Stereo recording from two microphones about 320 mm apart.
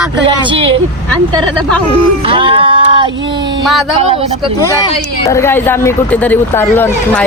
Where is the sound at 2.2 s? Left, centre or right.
Centre.